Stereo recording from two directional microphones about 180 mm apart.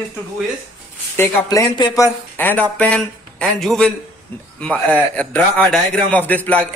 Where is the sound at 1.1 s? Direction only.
15° left (ahead or behind).